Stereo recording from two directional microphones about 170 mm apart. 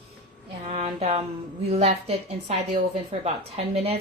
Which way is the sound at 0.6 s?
40° right (ahead or behind).